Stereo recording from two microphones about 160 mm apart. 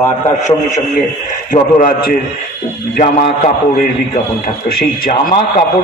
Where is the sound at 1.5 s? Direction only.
60° left (ahead or behind).